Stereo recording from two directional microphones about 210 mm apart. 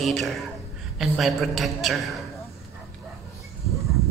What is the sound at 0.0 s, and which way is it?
A man's voice, centre (ahead or behind).